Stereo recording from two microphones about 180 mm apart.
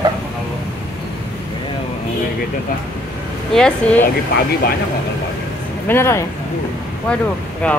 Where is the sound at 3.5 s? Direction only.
5° left (ahead or behind).